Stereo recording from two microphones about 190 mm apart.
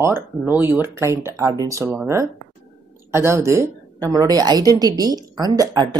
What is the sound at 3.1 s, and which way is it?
A woman's voice, 15° right (ahead or behind).